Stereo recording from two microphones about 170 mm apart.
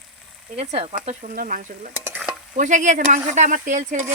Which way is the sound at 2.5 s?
45° right (ahead or behind).